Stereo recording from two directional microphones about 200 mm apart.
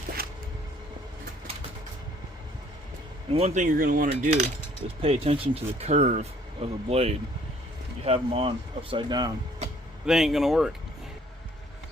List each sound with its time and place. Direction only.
3.3 s speech: 35° right (ahead or behind)
10.1 s speech: centre (ahead or behind)